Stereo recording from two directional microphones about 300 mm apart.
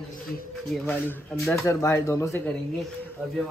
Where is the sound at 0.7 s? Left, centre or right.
Centre.